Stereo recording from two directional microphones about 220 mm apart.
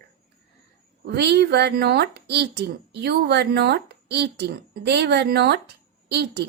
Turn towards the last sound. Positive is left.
turn(degrees=-50)  # may be behind; listen again after turning